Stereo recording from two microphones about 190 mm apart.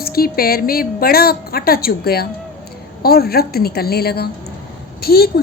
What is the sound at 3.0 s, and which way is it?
A woman's voice, 55° left (ahead or behind).